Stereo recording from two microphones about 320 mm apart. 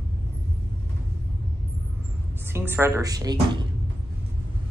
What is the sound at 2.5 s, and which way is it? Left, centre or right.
Speech, centre.